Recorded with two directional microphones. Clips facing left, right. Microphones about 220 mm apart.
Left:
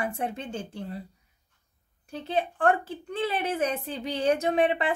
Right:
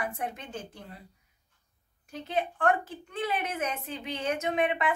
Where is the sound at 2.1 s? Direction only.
30° left (ahead or behind).